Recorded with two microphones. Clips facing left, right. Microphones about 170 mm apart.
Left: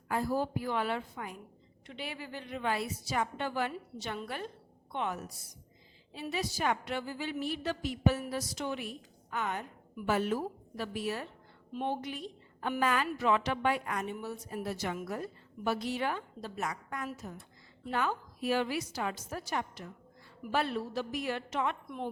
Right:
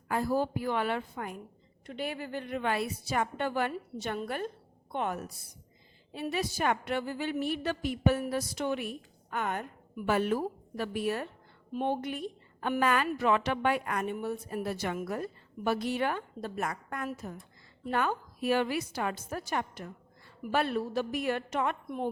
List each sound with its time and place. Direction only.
0.1 s a woman's voice: 60° right (ahead or behind)